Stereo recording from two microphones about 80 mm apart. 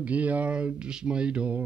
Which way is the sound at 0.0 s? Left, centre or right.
Centre.